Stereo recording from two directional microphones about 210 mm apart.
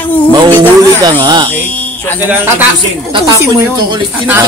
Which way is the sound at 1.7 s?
10° left (ahead or behind).